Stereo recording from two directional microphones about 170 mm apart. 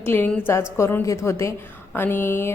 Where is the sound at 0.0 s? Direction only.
10° left (ahead or behind).